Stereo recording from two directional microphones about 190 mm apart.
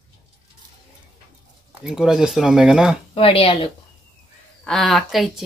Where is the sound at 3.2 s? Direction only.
30° left (ahead or behind).